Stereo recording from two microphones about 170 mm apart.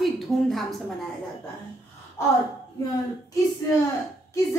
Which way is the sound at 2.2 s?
15° left (ahead or behind).